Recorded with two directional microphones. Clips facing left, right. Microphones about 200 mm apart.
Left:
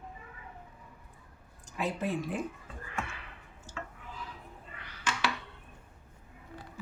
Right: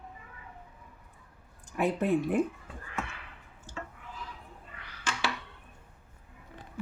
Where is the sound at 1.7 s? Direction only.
60° right (ahead or behind).